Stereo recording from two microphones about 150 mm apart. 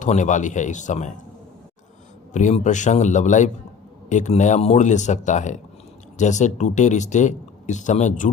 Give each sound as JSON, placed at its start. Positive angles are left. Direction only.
{"t": 0.0, "sound": "a man's voice", "side_deg": 55}
{"t": 2.3, "sound": "a man's voice", "side_deg": 55}